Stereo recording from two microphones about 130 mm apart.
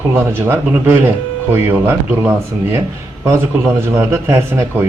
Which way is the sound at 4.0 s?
20° right (ahead or behind).